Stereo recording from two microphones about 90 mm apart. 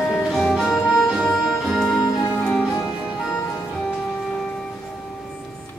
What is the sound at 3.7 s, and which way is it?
Music, 10° left (ahead or behind).